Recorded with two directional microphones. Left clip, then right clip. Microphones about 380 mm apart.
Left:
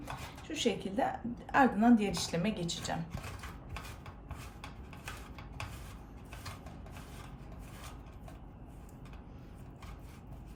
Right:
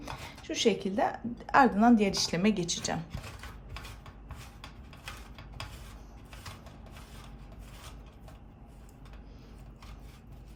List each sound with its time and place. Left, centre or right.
0.0 s speech: centre